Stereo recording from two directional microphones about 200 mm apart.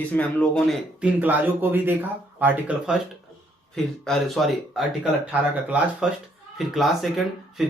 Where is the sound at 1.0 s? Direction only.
10° right (ahead or behind).